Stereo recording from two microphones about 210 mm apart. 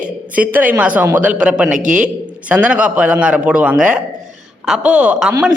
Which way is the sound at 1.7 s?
35° right (ahead or behind).